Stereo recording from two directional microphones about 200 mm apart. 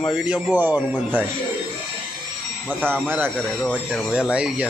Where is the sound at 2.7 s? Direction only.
10° right (ahead or behind).